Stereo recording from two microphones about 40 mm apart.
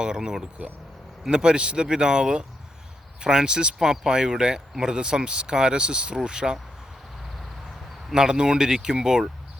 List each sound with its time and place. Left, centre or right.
0.0 s speech: centre
8.1 s speech: centre